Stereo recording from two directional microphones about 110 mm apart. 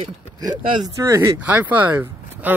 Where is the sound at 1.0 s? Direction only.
30° right (ahead or behind).